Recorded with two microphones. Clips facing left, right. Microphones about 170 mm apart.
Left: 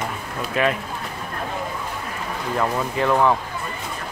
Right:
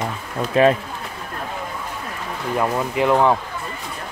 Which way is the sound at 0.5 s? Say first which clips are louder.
Right 7 dB; 30° right (ahead or behind).